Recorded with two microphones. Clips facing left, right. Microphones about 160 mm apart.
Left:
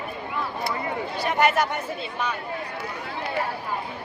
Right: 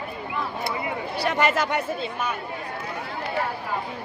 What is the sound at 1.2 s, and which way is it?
Speech, 90° right.